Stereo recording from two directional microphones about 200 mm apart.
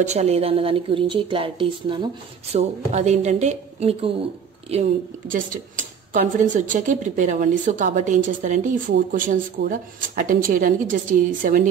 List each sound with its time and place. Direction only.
0.0 s a woman's voice: 35° right (ahead or behind)
5.3 s speech: 40° right (ahead or behind)